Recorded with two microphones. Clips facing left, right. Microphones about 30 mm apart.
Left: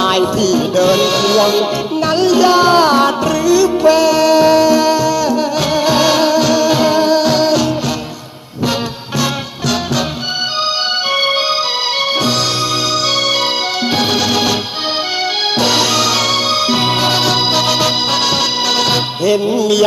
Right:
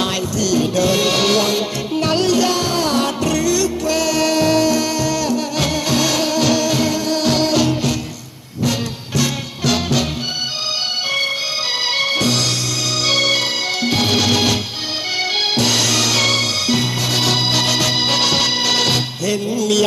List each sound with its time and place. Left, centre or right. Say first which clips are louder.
0.1 s music: left 8 dB; left
0.4 s music: left 1 dB; centre
2.3 s music: left 8 dB; centre
6.4 s music: left 4 dB; centre
6.7 s music: left 7 dB; centre
9.6 s music: left 1 dB; centre
11.9 s music: left 2 dB; centre
15.5 s music: left 5 dB; centre
16.8 s music: left 7 dB; left
17.2 s organ: left 3 dB; centre
18.1 s music: left 2 dB; centre
19.2 s music: left 6 dB; centre